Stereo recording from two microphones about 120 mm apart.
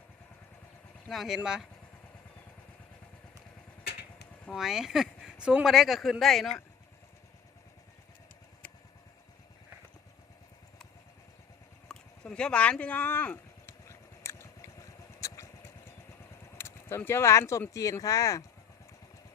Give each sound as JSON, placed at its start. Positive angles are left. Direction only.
{"t": 1.0, "sound": "speech", "side_deg": 0}
{"t": 4.5, "sound": "speech", "side_deg": -5}
{"t": 11.9, "sound": "a sound", "side_deg": 5}
{"t": 16.6, "sound": "speech", "side_deg": 20}